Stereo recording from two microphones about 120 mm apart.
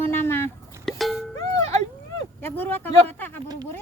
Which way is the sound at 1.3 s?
30° left (ahead or behind).